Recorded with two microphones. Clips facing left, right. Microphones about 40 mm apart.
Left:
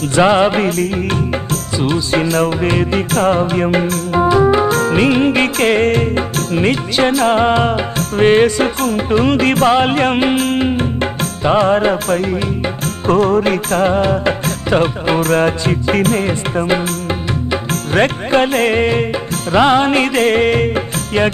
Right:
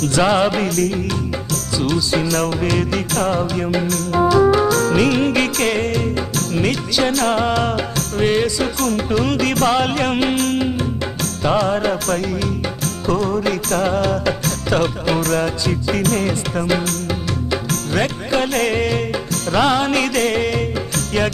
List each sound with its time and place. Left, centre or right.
0.0 s music: left
4.1 s organ: left
4.7 s music: left
7.9 s music: left